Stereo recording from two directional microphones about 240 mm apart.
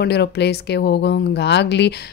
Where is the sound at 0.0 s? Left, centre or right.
Left.